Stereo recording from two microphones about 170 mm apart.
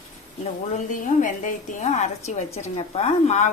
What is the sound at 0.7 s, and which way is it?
Speech, 50° left (ahead or behind).